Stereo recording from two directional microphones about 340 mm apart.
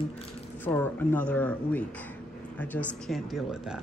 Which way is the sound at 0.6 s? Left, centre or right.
Centre.